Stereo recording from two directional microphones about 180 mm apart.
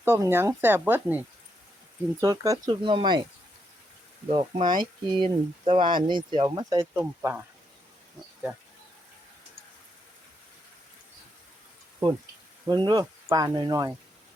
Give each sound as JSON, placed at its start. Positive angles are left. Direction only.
{"t": 0.0, "sound": "speech", "side_deg": -15}
{"t": 2.2, "sound": "speech", "side_deg": -20}
{"t": 4.3, "sound": "speech", "side_deg": -30}
{"t": 12.6, "sound": "speech", "side_deg": -25}